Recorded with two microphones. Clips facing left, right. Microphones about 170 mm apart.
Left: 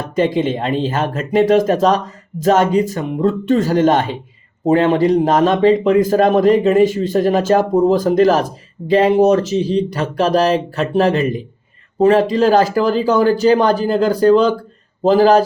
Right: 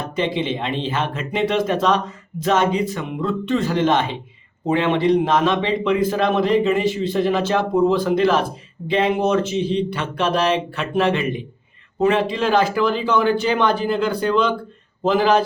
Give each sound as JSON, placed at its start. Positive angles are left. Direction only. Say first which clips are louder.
{"t": 0.2, "sound": "a man's voice", "louder": "left 6 dB", "side_deg": 45}